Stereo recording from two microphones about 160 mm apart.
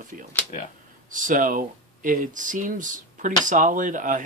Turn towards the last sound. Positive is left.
turn(degrees=-55)  # may be behind; listen again after turning